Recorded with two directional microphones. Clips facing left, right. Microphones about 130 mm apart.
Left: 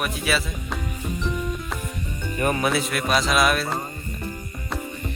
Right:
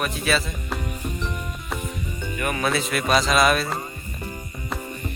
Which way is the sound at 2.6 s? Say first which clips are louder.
Even; 5° left (ahead or behind).